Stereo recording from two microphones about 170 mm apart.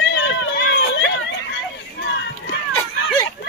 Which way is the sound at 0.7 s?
90° left.